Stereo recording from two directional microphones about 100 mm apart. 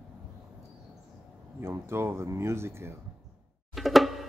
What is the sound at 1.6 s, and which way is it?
Speech, 25° right (ahead or behind).